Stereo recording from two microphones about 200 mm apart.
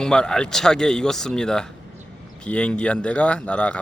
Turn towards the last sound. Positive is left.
turn(degrees=5)  # may be behind; listen again after turning